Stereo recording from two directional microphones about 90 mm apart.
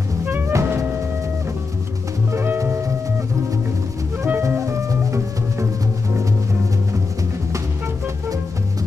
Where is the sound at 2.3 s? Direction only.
25° right (ahead or behind).